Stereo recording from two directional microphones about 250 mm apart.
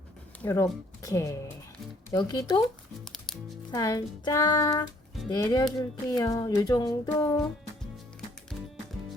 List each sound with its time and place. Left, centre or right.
0.4 s music: centre
3.0 s music: centre
3.7 s music: centre